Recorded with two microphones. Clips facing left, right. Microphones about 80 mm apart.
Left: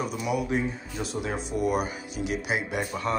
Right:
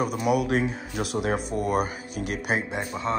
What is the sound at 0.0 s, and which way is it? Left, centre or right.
Speech, right.